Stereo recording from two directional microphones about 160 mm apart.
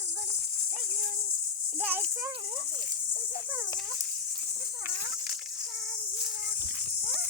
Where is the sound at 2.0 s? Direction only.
25° right (ahead or behind).